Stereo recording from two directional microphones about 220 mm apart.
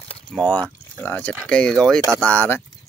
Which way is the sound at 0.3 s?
Centre (ahead or behind).